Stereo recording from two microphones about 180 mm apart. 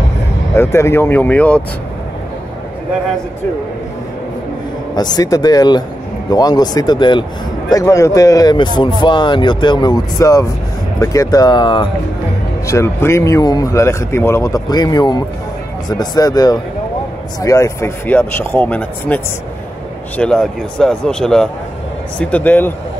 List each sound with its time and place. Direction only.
0.6 s speech: 15° left (ahead or behind)
4.9 s speech: 20° left (ahead or behind)
12.6 s speech: 15° left (ahead or behind)